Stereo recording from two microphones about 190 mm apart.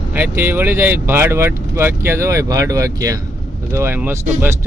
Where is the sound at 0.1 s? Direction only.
10° right (ahead or behind).